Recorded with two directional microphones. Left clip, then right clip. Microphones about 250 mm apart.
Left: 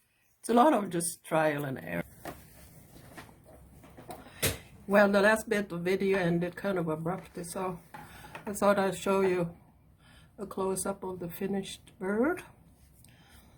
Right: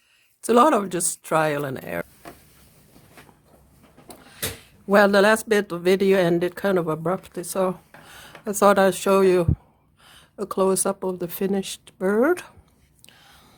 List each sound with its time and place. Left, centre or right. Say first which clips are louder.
0.4 s speech: right 7 dB; right
4.9 s speech: right 7 dB; right